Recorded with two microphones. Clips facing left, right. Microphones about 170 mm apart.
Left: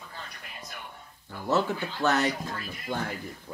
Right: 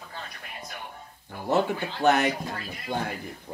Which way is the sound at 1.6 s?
55° right (ahead or behind).